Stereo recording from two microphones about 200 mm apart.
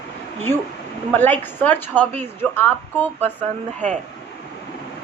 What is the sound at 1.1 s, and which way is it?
A woman's voice, 10° left (ahead or behind).